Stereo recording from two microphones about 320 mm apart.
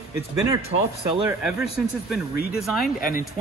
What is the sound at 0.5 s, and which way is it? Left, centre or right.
Speech, centre.